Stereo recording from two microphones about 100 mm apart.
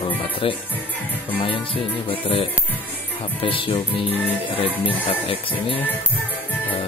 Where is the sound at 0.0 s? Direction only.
60° left (ahead or behind).